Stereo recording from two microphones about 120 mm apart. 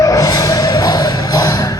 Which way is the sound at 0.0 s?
30° left (ahead or behind).